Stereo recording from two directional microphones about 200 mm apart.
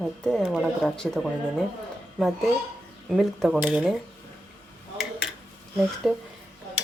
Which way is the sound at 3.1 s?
Centre (ahead or behind).